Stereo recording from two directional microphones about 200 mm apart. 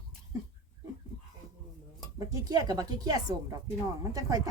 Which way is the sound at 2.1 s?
20° right (ahead or behind).